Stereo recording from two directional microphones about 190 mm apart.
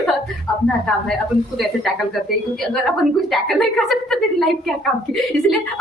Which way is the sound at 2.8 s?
Centre (ahead or behind).